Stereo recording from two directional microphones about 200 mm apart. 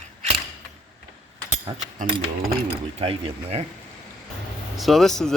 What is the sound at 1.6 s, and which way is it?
Speech, 35° right (ahead or behind).